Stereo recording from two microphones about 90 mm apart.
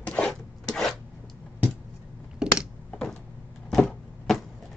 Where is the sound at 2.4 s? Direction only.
10° right (ahead or behind).